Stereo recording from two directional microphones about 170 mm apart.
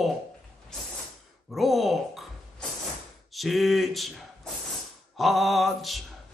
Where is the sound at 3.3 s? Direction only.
Centre (ahead or behind).